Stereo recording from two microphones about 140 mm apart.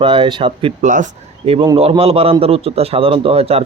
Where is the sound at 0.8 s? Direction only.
65° right (ahead or behind).